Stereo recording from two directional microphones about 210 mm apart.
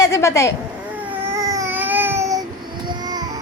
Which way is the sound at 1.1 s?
15° right (ahead or behind).